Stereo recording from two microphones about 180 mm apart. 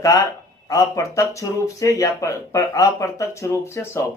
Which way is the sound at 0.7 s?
15° left (ahead or behind).